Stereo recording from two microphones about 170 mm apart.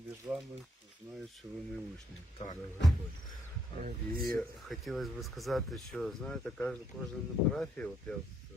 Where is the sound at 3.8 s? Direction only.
60° right (ahead or behind).